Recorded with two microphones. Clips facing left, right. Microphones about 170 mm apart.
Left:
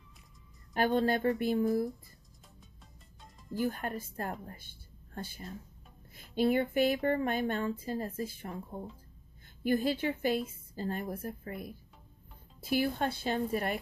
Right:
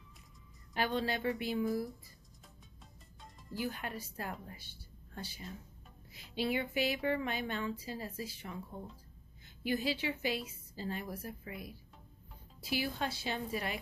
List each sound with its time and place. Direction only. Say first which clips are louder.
0.7 s speech: left 6 dB; 50° left (ahead or behind)
3.2 s music: left 4 dB; centre (ahead or behind)
3.5 s speech: left 6 dB; 50° left (ahead or behind)
9.6 s speech: left 5 dB; 50° left (ahead or behind)